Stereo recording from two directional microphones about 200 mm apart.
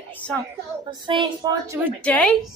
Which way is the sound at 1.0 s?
25° right (ahead or behind).